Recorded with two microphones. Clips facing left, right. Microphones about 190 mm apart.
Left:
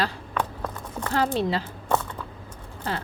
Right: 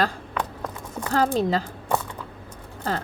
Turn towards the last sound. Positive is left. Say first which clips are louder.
# right 3 dB
turn(degrees=-40)  # may be behind; listen again after turning